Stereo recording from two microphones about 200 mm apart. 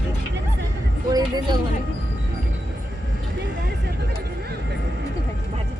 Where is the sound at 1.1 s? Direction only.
20° right (ahead or behind).